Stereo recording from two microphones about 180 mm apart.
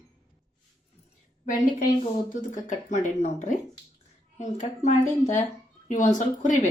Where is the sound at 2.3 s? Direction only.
45° left (ahead or behind).